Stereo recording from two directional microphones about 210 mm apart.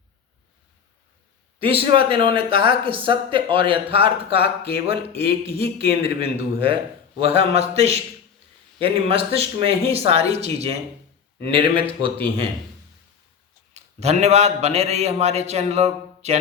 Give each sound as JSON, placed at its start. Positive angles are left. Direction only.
{"t": 1.6, "sound": "speech", "side_deg": -25}
{"t": 13.7, "sound": "a man's voice", "side_deg": -30}